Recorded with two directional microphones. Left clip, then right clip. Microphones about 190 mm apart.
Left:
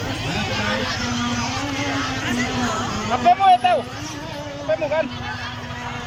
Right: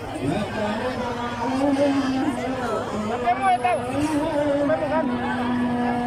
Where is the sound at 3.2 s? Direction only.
20° left (ahead or behind).